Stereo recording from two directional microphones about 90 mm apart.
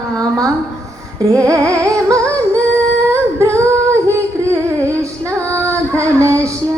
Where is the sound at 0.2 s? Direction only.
40° right (ahead or behind).